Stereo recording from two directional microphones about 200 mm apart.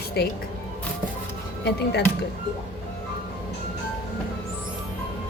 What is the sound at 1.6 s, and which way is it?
Speech, 55° left (ahead or behind).